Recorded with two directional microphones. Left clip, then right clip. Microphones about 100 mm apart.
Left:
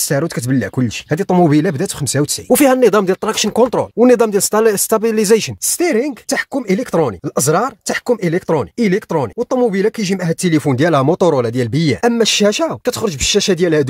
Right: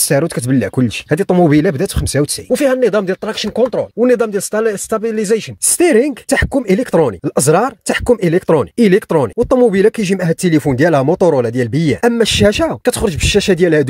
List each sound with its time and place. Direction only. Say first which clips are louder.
0.1 s speech: right 4 dB; 10° right (ahead or behind)
1.3 s speech: right 1 dB; centre (ahead or behind)
2.7 s speech: left 2 dB; 35° left (ahead or behind)
5.8 s speech: right 5 dB; 20° right (ahead or behind); by 13.8 s 5° right (ahead or behind)